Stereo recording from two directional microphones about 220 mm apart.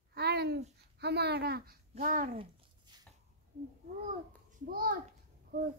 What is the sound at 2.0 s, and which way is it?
Speech, 35° right (ahead or behind).